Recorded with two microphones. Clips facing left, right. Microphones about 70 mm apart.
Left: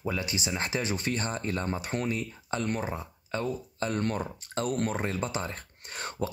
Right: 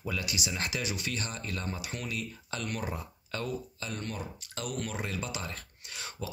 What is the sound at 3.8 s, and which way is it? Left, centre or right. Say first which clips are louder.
Speech: left 8 dB; left.